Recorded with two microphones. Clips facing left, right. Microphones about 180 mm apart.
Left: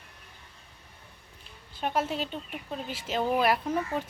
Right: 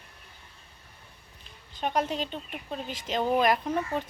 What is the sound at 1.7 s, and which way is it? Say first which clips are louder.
A woman's voice: right 1 dB; 5° left (ahead or behind).